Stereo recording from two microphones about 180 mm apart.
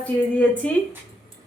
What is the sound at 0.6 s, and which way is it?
Speech, 5° left (ahead or behind).